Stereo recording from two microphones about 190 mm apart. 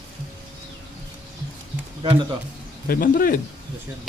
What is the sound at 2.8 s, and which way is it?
Speech, 50° left (ahead or behind).